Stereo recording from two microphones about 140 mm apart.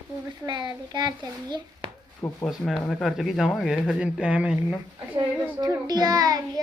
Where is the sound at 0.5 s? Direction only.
30° right (ahead or behind).